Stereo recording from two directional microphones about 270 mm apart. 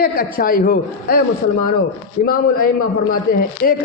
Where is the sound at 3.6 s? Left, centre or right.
Left.